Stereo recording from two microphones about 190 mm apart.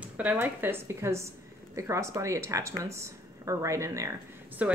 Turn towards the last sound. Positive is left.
turn(degrees=-10)  # may be behind; listen again after turning